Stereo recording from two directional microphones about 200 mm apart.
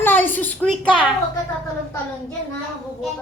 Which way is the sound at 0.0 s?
10° left (ahead or behind).